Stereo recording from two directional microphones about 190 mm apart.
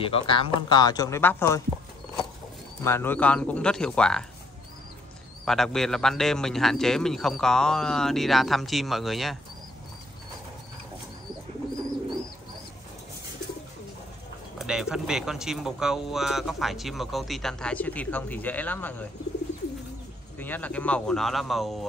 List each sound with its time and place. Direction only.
0.0 s speech: 25° left (ahead or behind)
2.8 s speech: 10° left (ahead or behind)
5.4 s speech: centre (ahead or behind)
14.6 s speech: 5° right (ahead or behind)
20.3 s speech: 10° left (ahead or behind)